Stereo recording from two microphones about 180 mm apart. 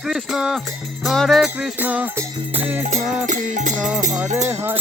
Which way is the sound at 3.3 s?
45° right (ahead or behind).